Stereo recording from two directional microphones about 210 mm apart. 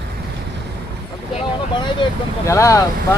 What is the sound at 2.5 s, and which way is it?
Speech, 15° left (ahead or behind).